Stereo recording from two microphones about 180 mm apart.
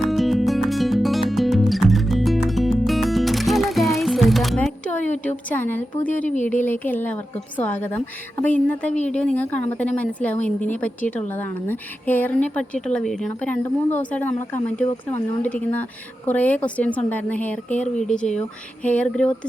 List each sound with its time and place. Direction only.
0.1 s music: centre (ahead or behind)
5.5 s a woman's voice: 10° left (ahead or behind)
6.2 s speech: 45° left (ahead or behind)
6.5 s a woman's voice: 10° left (ahead or behind)